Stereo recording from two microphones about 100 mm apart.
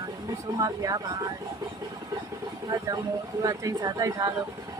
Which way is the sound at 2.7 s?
35° right (ahead or behind).